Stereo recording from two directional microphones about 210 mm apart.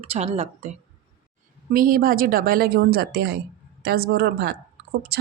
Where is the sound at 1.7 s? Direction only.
40° right (ahead or behind).